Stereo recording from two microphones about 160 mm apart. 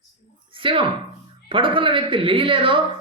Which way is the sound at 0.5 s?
35° right (ahead or behind).